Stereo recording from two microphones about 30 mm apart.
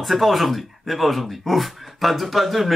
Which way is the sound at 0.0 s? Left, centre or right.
Centre.